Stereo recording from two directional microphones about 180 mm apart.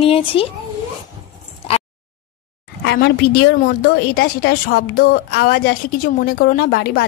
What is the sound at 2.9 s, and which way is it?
A woman's voice, 70° left (ahead or behind).